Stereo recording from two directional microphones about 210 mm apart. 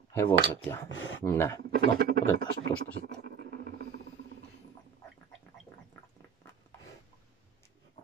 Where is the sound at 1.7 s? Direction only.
45° right (ahead or behind).